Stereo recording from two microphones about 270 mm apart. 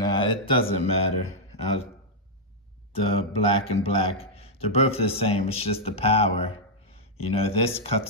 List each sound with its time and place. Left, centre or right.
0.0 s speech: centre
2.9 s speech: left